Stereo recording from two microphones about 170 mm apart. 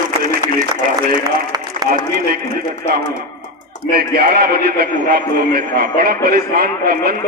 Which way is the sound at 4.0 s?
65° right (ahead or behind).